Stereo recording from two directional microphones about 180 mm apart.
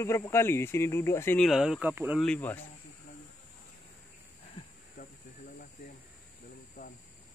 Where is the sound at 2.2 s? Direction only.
10° left (ahead or behind).